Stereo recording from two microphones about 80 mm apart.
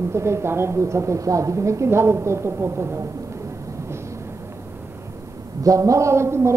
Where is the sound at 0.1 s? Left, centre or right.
Right.